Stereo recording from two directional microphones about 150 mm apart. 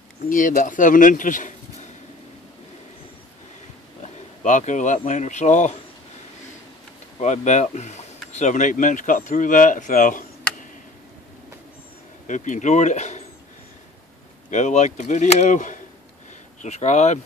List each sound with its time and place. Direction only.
0.3 s speech: 60° left (ahead or behind)
4.0 s speech: 55° left (ahead or behind)
7.2 s speech: 50° left (ahead or behind)
12.3 s speech: 55° left (ahead or behind)
14.5 s speech: 50° left (ahead or behind)